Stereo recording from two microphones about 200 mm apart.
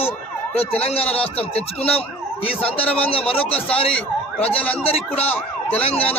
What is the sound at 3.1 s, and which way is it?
Speech, 30° left (ahead or behind).